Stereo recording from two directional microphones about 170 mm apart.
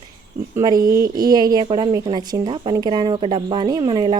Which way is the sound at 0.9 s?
60° right (ahead or behind).